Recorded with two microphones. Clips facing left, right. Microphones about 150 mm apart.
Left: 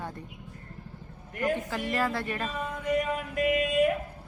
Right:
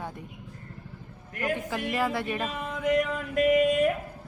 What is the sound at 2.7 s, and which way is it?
Male singing, 90° right.